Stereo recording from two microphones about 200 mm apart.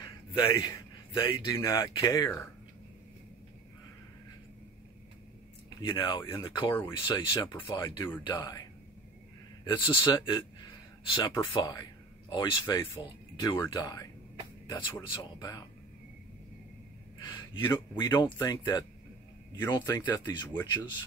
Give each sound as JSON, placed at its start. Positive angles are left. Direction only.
{"t": 0.6, "sound": "a man's voice", "side_deg": 20}
{"t": 5.8, "sound": "speech", "side_deg": 20}
{"t": 7.4, "sound": "speech", "side_deg": 10}
{"t": 9.7, "sound": "speech", "side_deg": 20}
{"t": 17.2, "sound": "speech", "side_deg": 20}